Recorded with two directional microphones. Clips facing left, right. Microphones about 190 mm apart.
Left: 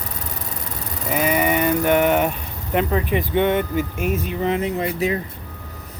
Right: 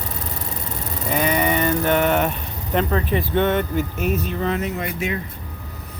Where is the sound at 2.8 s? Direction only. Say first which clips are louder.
Left 1 dB; 15° left (ahead or behind).